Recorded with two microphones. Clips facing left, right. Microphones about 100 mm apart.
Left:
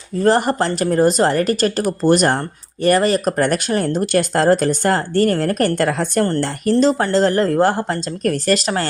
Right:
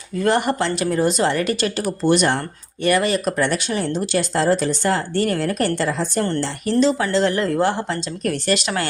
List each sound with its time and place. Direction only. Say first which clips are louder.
0.2 s speech: left 3 dB; 35° left (ahead or behind); by 6.2 s 60° left (ahead or behind)
6.2 s speech: left 4 dB; 45° left (ahead or behind)